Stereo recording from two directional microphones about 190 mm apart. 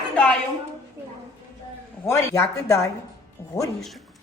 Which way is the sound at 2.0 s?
15° left (ahead or behind).